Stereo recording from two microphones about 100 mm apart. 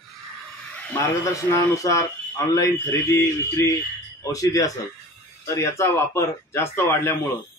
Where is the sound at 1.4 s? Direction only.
30° left (ahead or behind).